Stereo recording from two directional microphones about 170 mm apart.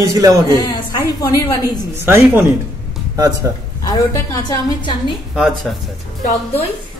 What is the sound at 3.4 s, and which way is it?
Speech, 20° right (ahead or behind).